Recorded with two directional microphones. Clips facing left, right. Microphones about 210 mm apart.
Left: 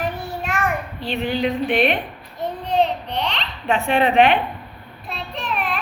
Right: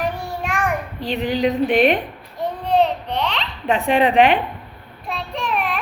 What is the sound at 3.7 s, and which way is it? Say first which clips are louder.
Speech: right 2 dB; 35° right (ahead or behind).